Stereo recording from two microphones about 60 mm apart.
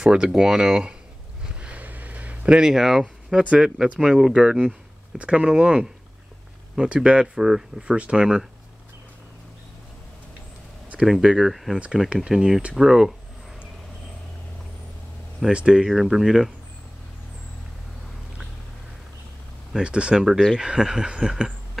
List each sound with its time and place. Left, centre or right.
0.0 s speech: centre
1.4 s a sound: centre
3.4 s speech: centre
6.9 s speech: centre
7.3 s speech: centre
7.8 s speech: centre
11.0 s speech: centre
11.5 s speech: centre
15.5 s speech: centre
19.8 s speech: centre